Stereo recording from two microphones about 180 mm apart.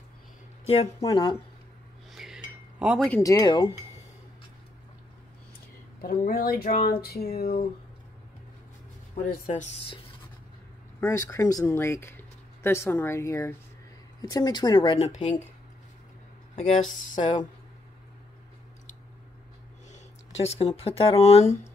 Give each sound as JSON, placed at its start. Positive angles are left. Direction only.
{"t": 0.7, "sound": "speech", "side_deg": 30}
{"t": 2.1, "sound": "chink", "side_deg": -5}
{"t": 2.8, "sound": "speech", "side_deg": -5}
{"t": 3.1, "sound": "speech", "side_deg": 15}
{"t": 5.9, "sound": "speech", "side_deg": 55}
{"t": 9.1, "sound": "speech", "side_deg": 45}
{"t": 11.0, "sound": "speech", "side_deg": 20}
{"t": 16.5, "sound": "speech", "side_deg": 35}
{"t": 20.4, "sound": "speech", "side_deg": 35}